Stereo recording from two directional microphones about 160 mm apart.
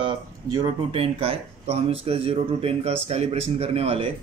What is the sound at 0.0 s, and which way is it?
Speech, 25° right (ahead or behind).